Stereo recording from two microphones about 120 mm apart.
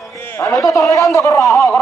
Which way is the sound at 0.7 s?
25° left (ahead or behind).